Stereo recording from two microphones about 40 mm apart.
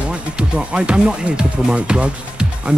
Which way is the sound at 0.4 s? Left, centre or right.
Right.